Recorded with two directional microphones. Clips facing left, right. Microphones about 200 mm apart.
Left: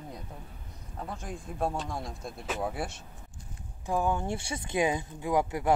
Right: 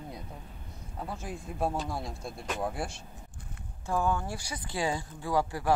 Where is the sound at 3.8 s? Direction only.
20° left (ahead or behind).